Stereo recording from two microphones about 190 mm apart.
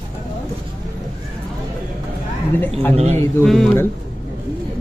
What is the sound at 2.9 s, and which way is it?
Speech, 35° right (ahead or behind).